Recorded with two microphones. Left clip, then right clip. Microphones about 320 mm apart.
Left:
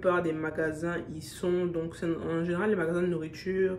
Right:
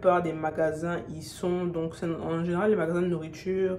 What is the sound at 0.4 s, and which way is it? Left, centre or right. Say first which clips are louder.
Speech: right 4 dB; centre.